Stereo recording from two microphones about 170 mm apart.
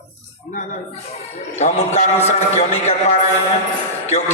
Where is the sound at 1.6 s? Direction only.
40° left (ahead or behind).